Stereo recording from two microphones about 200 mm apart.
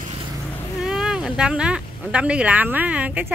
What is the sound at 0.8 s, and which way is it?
Speech, centre (ahead or behind).